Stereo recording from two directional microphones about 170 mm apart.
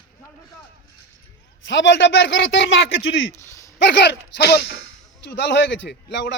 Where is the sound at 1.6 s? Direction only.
90° left.